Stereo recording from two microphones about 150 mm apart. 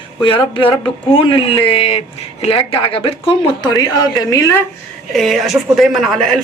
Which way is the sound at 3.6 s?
25° left (ahead or behind).